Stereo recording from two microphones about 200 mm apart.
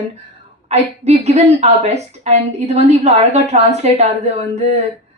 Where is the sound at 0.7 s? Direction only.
35° right (ahead or behind).